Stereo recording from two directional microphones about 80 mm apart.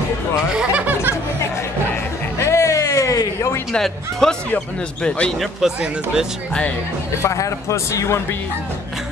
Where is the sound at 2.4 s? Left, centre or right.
Left.